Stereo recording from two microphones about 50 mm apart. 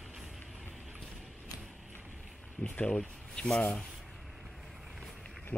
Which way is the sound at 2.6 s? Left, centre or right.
Left.